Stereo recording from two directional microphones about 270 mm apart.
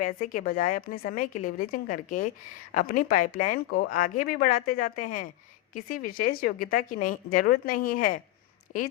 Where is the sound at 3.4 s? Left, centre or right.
Left.